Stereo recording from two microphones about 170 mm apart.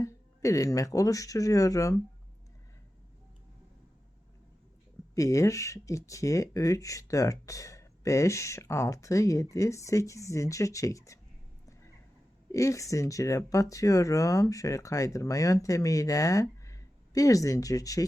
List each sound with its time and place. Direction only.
0.0 s speech: 20° left (ahead or behind)
5.1 s speech: 20° left (ahead or behind)
12.5 s speech: 20° left (ahead or behind)